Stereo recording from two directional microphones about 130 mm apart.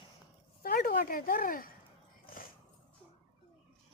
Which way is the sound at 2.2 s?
90° left.